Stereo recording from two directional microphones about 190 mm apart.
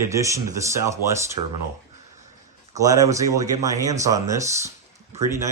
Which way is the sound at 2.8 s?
20° right (ahead or behind).